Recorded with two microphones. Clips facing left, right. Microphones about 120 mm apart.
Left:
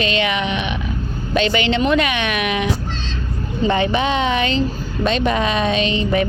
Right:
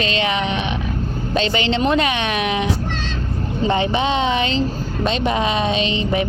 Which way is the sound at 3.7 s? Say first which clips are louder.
Left 1 dB; 25° right (ahead or behind).